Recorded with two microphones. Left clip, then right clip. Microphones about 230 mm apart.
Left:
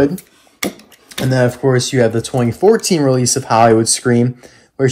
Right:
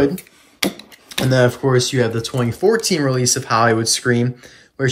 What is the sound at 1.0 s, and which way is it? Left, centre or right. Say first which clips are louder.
Speech: even; centre.